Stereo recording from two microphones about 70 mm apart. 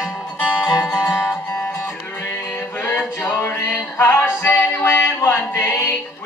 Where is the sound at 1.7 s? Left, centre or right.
Left.